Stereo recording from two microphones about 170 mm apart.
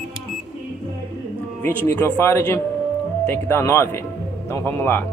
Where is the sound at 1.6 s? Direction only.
15° left (ahead or behind).